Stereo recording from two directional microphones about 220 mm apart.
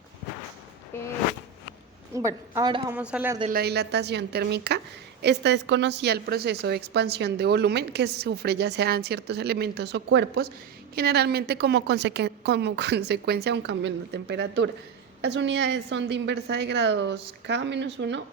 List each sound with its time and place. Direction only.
0.9 s a sound: 10° left (ahead or behind)
2.1 s a woman's voice: 15° right (ahead or behind)
2.9 s a woman's voice: 5° right (ahead or behind)
3.5 s a woman's voice: 45° right (ahead or behind)